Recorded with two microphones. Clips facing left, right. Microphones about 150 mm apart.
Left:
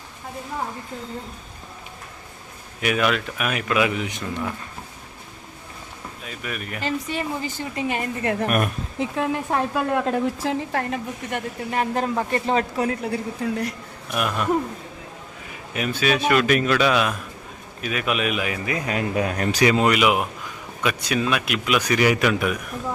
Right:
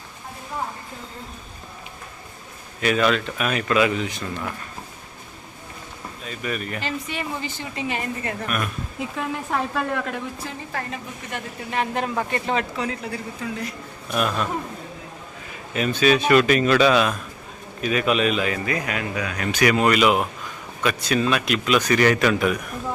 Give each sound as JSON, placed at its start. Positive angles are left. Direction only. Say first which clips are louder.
{"t": 2.8, "sound": "speech", "louder": "right 2 dB", "side_deg": 10}
{"t": 6.2, "sound": "a man's voice", "louder": "right 4 dB", "side_deg": 5}
{"t": 6.8, "sound": "a woman's voice", "louder": "left 3 dB", "side_deg": 40}
{"t": 9.0, "sound": "speech", "louder": "left 5 dB", "side_deg": 20}
{"t": 10.2, "sound": "a woman's voice", "louder": "left 9 dB", "side_deg": 75}
{"t": 11.7, "sound": "a woman's voice", "louder": "left 1 dB", "side_deg": 40}
{"t": 14.1, "sound": "speech", "louder": "even", "side_deg": 10}
{"t": 15.7, "sound": "a man's voice", "louder": "right 3 dB", "side_deg": 10}
{"t": 19.1, "sound": "a woman's voice", "louder": "left 4 dB", "side_deg": 45}
{"t": 19.6, "sound": "speech", "louder": "right 1 dB", "side_deg": 20}